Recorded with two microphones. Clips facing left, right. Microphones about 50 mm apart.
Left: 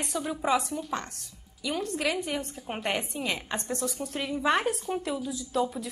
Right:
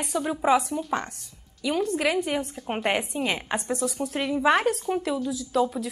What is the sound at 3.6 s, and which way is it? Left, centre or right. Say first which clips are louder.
A woman's voice: right 5 dB; centre.